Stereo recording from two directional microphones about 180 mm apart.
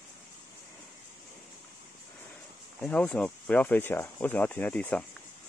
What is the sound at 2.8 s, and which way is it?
Speech, 5° left (ahead or behind).